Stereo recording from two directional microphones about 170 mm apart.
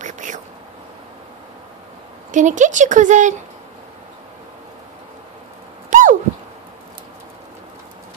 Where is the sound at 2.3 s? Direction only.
45° right (ahead or behind).